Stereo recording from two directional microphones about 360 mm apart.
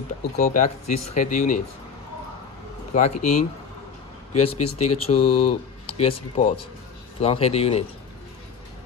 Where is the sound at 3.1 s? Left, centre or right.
Left.